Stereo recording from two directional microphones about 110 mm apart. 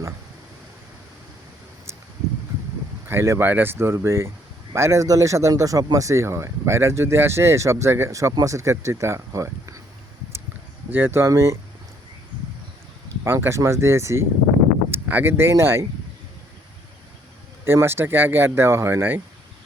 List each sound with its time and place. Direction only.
3.1 s speech: 20° right (ahead or behind)
10.8 s speech: 20° right (ahead or behind)
13.2 s speech: 20° right (ahead or behind)
17.7 s speech: 20° right (ahead or behind)